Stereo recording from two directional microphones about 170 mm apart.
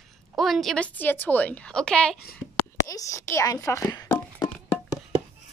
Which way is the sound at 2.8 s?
20° left (ahead or behind).